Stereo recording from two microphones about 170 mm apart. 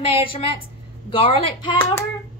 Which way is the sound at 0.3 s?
30° left (ahead or behind).